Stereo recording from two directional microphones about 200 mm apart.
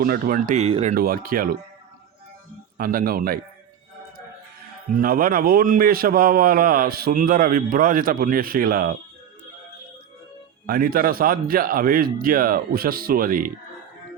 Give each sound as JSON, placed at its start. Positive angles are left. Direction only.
{"t": 0.0, "sound": "speech", "side_deg": -45}
{"t": 0.9, "sound": "a man's voice", "side_deg": -50}
{"t": 2.7, "sound": "a man's voice", "side_deg": -45}
{"t": 4.9, "sound": "a man's voice", "side_deg": -45}
{"t": 10.7, "sound": "a man's voice", "side_deg": -45}